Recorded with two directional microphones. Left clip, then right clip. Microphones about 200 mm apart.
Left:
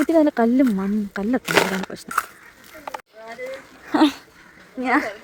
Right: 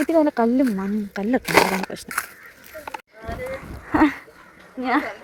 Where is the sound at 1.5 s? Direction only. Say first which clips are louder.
Right 2 dB; 20° right (ahead or behind).